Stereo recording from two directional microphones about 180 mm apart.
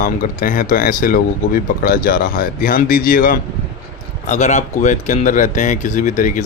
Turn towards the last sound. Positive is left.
turn(degrees=45)  # may be behind; listen again after turning